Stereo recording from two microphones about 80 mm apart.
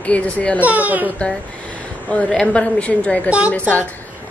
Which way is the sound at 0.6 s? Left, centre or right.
Right.